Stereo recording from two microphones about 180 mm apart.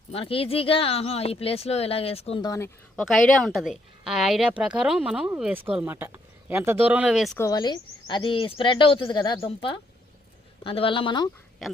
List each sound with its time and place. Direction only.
0.1 s speech: 30° left (ahead or behind)
2.4 s speech: 20° left (ahead or behind)
2.9 s a woman's voice: 5° left (ahead or behind)
7.3 s speech: 20° left (ahead or behind)